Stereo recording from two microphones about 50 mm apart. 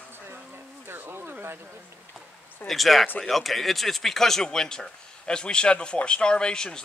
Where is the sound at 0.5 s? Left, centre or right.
Right.